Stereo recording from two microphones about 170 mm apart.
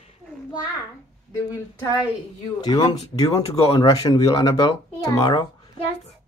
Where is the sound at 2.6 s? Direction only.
25° left (ahead or behind).